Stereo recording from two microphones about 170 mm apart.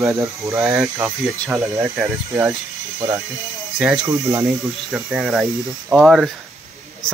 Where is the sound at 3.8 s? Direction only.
5° right (ahead or behind).